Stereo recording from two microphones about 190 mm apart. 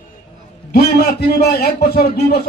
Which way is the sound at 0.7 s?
55° left (ahead or behind).